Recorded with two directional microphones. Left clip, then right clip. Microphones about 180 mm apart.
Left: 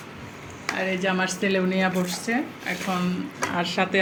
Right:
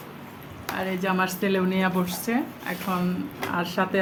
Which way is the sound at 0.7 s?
10° right (ahead or behind).